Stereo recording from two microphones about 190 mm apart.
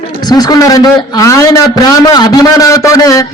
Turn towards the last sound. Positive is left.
turn(degrees=20)  # may be behind; listen again after turning